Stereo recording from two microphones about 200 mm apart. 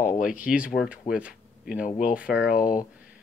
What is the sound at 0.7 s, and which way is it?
Speech, 5° right (ahead or behind).